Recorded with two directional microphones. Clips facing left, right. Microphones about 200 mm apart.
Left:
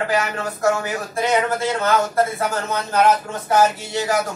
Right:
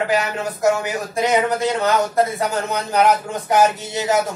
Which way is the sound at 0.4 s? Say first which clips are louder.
Right 2 dB; 20° right (ahead or behind).